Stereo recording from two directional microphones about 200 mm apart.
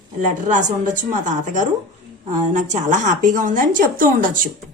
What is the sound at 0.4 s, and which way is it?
A woman's voice, 40° right (ahead or behind).